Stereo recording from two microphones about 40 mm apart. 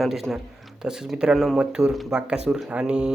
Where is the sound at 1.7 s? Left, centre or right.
Centre.